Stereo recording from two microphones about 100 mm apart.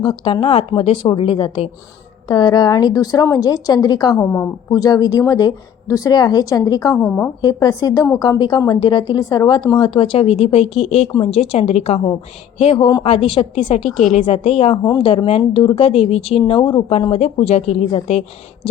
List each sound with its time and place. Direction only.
0.0 s speech: 60° left (ahead or behind); by 0.9 s 80° left
1.0 s speech: 60° left (ahead or behind)
2.2 s a woman's voice: 45° left (ahead or behind)
4.2 s a woman's voice: 20° left (ahead or behind)
4.7 s a woman's voice: 40° left (ahead or behind)
6.9 s a woman's voice: 5° left (ahead or behind)
7.4 s a woman's voice: 40° left (ahead or behind)
9.9 s a woman's voice: 60° left (ahead or behind); by 11.9 s 90° left
12.7 s a woman's voice: 55° left (ahead or behind); by 14.8 s 90° left
15.0 s speech: 70° left (ahead or behind)
16.5 s speech: 55° left (ahead or behind)
17.1 s speech: 80° left